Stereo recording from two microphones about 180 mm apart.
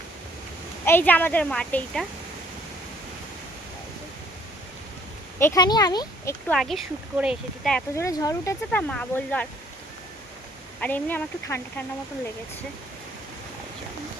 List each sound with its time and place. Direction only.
0.9 s a woman's voice: 10° left (ahead or behind)
5.5 s speech: 20° left (ahead or behind)
6.5 s speech: centre (ahead or behind)
7.9 s a woman's voice: 15° left (ahead or behind)
8.9 s a woman's voice: 5° left (ahead or behind)
10.8 s a woman's voice: 10° left (ahead or behind)